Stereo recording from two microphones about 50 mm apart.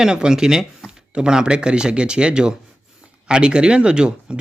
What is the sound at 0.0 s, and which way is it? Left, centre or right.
Speech, centre.